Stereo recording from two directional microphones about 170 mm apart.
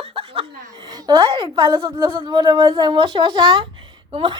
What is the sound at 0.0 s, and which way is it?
A woman's voice, 35° right (ahead or behind).